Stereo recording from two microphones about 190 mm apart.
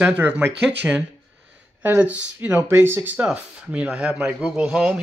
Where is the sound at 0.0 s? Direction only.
10° right (ahead or behind).